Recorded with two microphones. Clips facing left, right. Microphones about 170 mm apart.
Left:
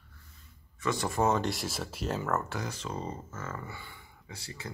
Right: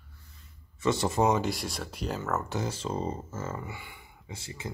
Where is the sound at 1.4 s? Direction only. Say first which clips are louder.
Right 1 dB; centre (ahead or behind).